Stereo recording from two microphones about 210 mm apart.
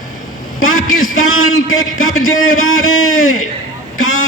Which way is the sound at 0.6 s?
75° left (ahead or behind).